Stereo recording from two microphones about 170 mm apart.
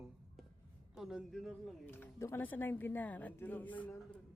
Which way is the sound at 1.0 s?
5° right (ahead or behind).